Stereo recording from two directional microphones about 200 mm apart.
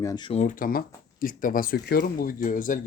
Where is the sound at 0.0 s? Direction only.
20° left (ahead or behind).